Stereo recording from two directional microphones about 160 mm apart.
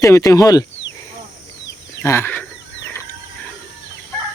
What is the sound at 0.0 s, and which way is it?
Speech, 20° left (ahead or behind).